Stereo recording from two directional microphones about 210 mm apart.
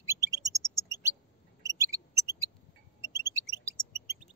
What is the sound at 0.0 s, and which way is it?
Chirp, 15° right (ahead or behind).